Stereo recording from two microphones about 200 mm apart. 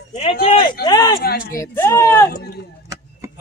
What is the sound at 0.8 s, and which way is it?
Speech, 20° left (ahead or behind).